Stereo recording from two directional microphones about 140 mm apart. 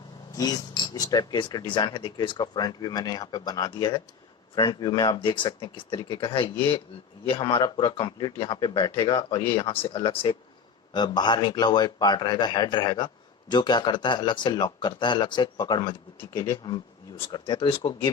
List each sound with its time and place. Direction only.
0.9 s a man's voice: 30° left (ahead or behind)